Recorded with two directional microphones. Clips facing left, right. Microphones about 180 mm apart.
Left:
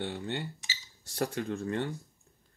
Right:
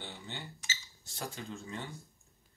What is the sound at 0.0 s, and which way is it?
Speech, 60° left (ahead or behind).